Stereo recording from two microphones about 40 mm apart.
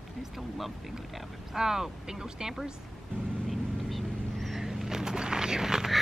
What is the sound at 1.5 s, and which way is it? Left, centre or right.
Speech, centre.